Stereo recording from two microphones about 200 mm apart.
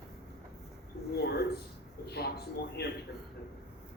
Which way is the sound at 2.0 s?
55° left (ahead or behind).